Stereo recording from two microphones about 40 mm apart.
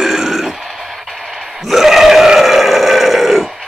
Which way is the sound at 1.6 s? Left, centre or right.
Centre.